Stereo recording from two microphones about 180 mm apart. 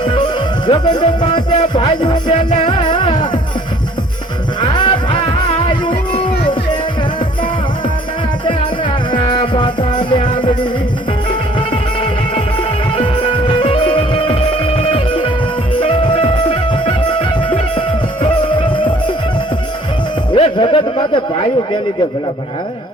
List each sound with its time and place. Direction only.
0.7 s music: 25° left (ahead or behind)
4.6 s music: 25° left (ahead or behind)
9.1 s music: 25° left (ahead or behind)
13.6 s music: 30° left (ahead or behind)
20.3 s music: 30° left (ahead or behind)